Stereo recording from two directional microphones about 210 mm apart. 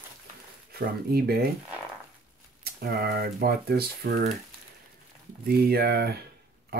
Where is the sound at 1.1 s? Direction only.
45° right (ahead or behind).